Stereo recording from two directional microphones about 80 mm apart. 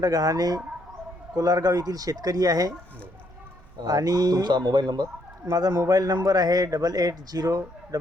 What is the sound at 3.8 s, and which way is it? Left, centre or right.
Speech, right.